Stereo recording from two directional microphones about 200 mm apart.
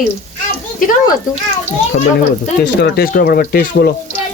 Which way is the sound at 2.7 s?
55° left (ahead or behind).